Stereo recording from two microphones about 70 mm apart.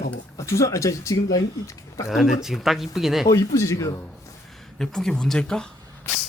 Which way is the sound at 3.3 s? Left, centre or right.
Left.